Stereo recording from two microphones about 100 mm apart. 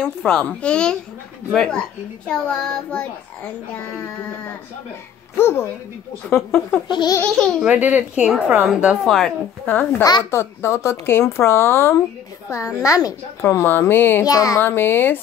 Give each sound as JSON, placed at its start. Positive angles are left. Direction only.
{"t": 0.0, "sound": "a child's voice", "side_deg": 10}
{"t": 5.4, "sound": "speech", "side_deg": 25}
{"t": 6.9, "sound": "laughter", "side_deg": 50}
{"t": 7.6, "sound": "a child's voice", "side_deg": -15}
{"t": 9.0, "sound": "speech", "side_deg": 0}
{"t": 9.7, "sound": "a woman's voice", "side_deg": 20}
{"t": 13.4, "sound": "speech", "side_deg": 25}
{"t": 14.2, "sound": "a woman's voice", "side_deg": 35}
{"t": 14.6, "sound": "speech", "side_deg": 20}